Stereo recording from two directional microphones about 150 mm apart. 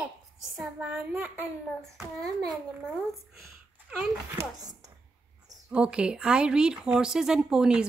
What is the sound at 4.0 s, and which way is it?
Speech, 20° right (ahead or behind).